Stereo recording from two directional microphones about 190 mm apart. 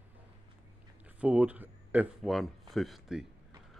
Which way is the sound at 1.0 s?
10° right (ahead or behind).